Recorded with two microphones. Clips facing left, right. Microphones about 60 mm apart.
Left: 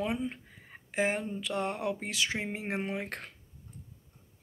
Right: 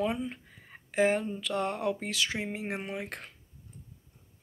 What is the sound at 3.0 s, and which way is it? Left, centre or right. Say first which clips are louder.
Speech: left 1 dB; left.